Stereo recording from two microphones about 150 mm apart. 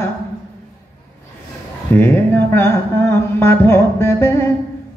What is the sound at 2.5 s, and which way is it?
Music, 15° left (ahead or behind).